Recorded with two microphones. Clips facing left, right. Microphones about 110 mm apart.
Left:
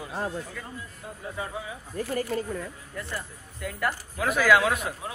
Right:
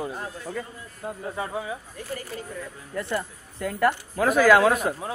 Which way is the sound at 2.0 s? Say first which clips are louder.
Left 8 dB; 45° left (ahead or behind).